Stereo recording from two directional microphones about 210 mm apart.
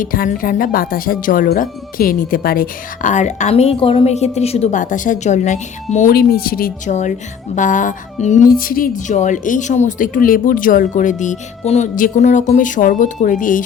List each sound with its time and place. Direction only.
0.0 s speech: 40° left (ahead or behind)